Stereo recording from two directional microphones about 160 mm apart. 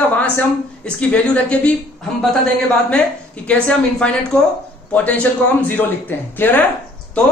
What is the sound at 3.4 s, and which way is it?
Speech, 5° left (ahead or behind).